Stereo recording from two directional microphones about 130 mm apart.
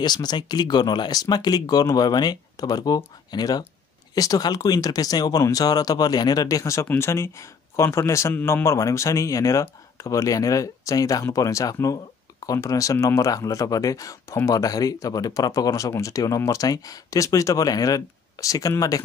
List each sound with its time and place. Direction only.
0.0 s speech: 35° left (ahead or behind)